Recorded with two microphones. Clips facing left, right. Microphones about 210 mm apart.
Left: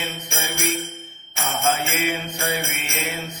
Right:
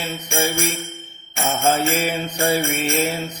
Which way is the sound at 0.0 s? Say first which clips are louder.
Right 7 dB; 35° right (ahead or behind).